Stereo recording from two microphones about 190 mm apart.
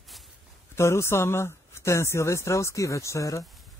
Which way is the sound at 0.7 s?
15° left (ahead or behind).